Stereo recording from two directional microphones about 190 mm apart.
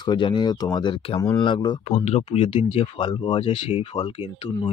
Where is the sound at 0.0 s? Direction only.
25° left (ahead or behind).